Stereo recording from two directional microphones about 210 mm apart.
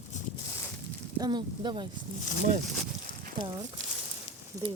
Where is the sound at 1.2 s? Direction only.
20° right (ahead or behind).